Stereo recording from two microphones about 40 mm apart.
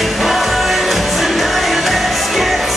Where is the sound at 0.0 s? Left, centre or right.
Centre.